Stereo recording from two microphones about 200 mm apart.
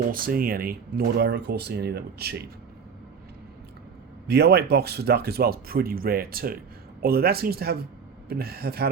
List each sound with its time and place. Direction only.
0.1 s speech: 45° right (ahead or behind)
4.3 s speech: 55° right (ahead or behind)